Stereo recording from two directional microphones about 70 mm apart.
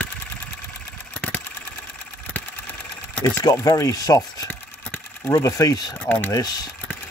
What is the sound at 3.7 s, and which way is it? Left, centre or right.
Speech, left.